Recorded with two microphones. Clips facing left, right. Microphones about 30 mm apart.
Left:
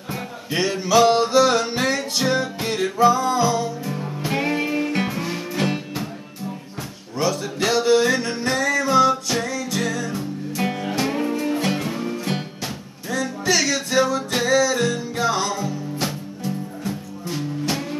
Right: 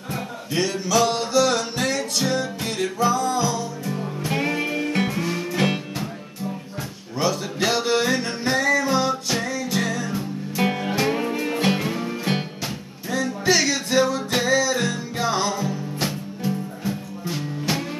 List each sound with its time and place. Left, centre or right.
0.5 s music: centre
3.8 s music: centre
7.2 s music: centre